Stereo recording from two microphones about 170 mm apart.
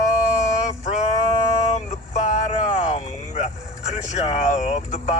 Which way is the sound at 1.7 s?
40° left (ahead or behind).